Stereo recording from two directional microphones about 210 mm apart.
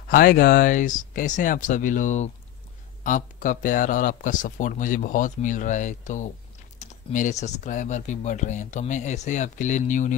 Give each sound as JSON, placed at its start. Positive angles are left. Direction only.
{"t": 0.1, "sound": "speech", "side_deg": 45}